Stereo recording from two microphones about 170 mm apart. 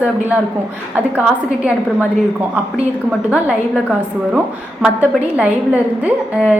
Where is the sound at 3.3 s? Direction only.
5° right (ahead or behind).